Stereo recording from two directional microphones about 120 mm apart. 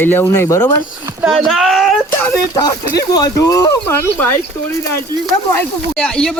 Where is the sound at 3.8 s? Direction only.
20° left (ahead or behind).